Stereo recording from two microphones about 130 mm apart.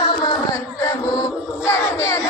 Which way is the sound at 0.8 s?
25° left (ahead or behind).